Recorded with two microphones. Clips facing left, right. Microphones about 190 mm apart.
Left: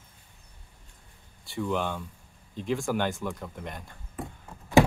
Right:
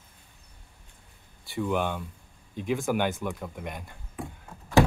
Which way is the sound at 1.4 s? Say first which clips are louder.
Right 2 dB; centre (ahead or behind).